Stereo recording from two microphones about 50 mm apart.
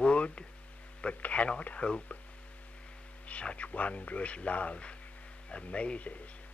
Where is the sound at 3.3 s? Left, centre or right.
Left.